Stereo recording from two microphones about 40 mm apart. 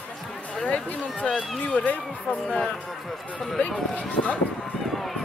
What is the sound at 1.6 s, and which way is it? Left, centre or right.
Speech, left.